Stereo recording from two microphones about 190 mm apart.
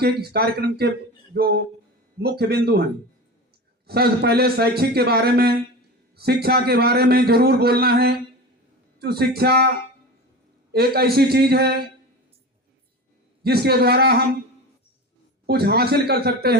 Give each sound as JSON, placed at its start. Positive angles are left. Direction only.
{"t": 0.0, "sound": "a man's voice", "side_deg": -55}
{"t": 3.8, "sound": "a man's voice", "side_deg": -55}
{"t": 10.7, "sound": "a man's voice", "side_deg": -55}
{"t": 13.4, "sound": "a man's voice", "side_deg": -55}
{"t": 15.4, "sound": "a man's voice", "side_deg": -55}